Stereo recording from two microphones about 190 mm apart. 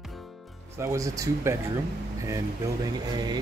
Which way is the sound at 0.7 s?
15° right (ahead or behind).